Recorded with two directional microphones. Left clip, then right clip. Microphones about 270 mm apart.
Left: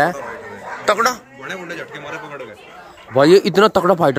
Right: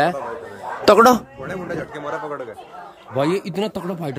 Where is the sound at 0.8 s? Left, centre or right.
Right.